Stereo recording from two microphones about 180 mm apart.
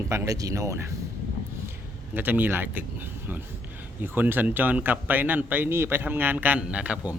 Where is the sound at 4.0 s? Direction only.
10° right (ahead or behind).